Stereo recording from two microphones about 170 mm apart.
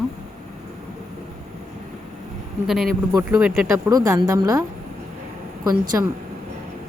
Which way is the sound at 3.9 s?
20° right (ahead or behind).